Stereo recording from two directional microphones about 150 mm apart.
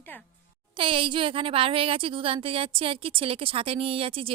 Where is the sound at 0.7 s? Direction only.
35° right (ahead or behind).